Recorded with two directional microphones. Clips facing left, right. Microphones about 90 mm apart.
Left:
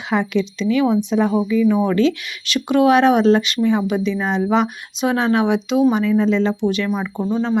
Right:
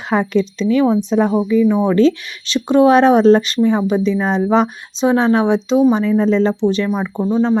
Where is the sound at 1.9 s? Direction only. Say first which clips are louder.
Right 4 dB; 35° right (ahead or behind).